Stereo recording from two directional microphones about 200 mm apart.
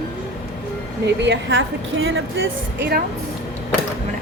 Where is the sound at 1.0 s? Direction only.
60° right (ahead or behind); by 2.5 s 75° right (ahead or behind).